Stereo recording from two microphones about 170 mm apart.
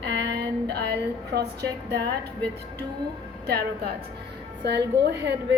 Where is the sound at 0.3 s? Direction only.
75° right (ahead or behind).